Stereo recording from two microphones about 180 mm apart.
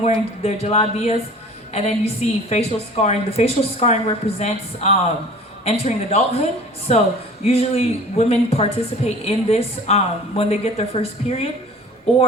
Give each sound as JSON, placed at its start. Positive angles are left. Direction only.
{"t": 0.0, "sound": "a woman's voice", "side_deg": 35}
{"t": 7.4, "sound": "a woman's voice", "side_deg": 35}